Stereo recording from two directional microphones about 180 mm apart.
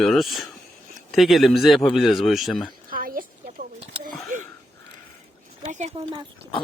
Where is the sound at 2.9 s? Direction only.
50° right (ahead or behind).